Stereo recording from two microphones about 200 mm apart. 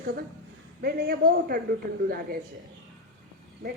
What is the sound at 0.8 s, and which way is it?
Speech, 50° right (ahead or behind).